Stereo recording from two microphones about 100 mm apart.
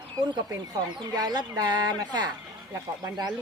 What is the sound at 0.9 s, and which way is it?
Speech, 40° right (ahead or behind).